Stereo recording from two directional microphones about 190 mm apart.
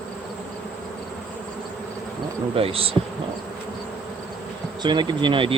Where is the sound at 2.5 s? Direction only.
30° right (ahead or behind).